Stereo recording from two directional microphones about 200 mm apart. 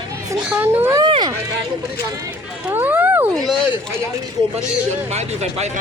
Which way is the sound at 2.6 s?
10° right (ahead or behind).